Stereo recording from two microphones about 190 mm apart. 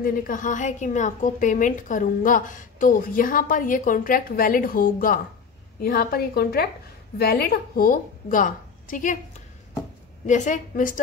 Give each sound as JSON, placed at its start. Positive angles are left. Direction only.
{"t": 0.0, "sound": "a woman's voice", "side_deg": 45}